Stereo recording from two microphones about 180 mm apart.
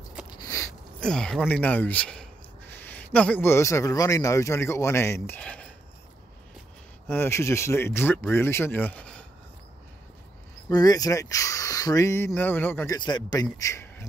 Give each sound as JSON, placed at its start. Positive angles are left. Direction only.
{"t": 0.4, "sound": "a sound", "side_deg": 15}
{"t": 1.0, "sound": "a man's voice", "side_deg": 5}
{"t": 7.1, "sound": "speech", "side_deg": 15}
{"t": 10.7, "sound": "speech", "side_deg": 20}
{"t": 12.9, "sound": "a man's voice", "side_deg": 25}